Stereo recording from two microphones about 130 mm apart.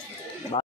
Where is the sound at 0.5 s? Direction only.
40° left (ahead or behind).